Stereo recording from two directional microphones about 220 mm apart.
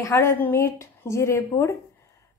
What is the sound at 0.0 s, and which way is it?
Speech, 10° left (ahead or behind).